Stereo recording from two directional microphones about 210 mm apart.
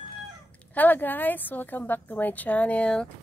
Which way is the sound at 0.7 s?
10° left (ahead or behind).